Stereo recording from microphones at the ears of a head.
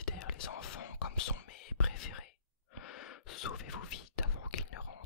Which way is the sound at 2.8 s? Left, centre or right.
Left.